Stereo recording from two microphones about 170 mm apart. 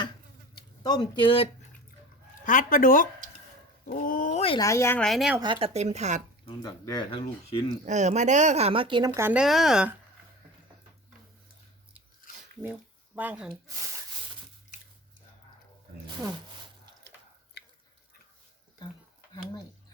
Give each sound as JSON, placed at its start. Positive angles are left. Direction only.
{"t": 0.8, "sound": "speech", "side_deg": 25}
{"t": 2.4, "sound": "speech", "side_deg": 50}
{"t": 4.6, "sound": "speech", "side_deg": 15}
{"t": 4.9, "sound": "speech", "side_deg": 0}
{"t": 5.4, "sound": "speech", "side_deg": -30}
{"t": 6.4, "sound": "speech", "side_deg": 25}
{"t": 7.9, "sound": "speech", "side_deg": -45}
{"t": 13.1, "sound": "speech", "side_deg": -10}
{"t": 17.6, "sound": "a sound", "side_deg": 75}